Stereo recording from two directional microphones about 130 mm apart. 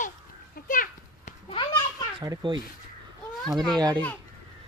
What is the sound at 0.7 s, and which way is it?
Children playing, 75° left (ahead or behind).